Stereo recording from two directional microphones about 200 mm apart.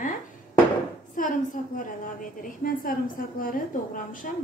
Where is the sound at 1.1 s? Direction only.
40° left (ahead or behind).